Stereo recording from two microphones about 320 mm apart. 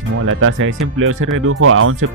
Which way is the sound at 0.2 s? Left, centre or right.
Right.